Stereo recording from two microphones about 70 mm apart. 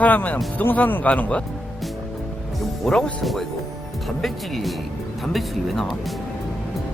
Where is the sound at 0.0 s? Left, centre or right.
Left.